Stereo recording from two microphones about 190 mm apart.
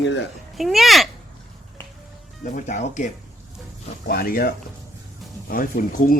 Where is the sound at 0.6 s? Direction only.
Centre (ahead or behind).